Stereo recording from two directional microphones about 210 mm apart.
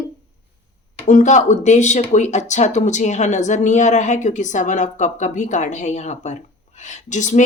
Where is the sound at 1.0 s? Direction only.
35° left (ahead or behind).